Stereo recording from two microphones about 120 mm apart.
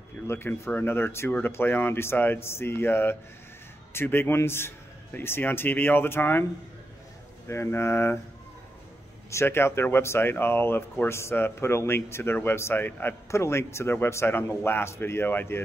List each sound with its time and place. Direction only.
0.3 s a man's voice: 15° left (ahead or behind)
7.4 s speech: 20° left (ahead or behind)
9.3 s speech: 20° left (ahead or behind)